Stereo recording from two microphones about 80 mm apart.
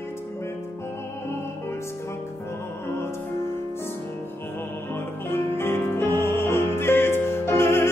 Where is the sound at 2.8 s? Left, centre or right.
Left.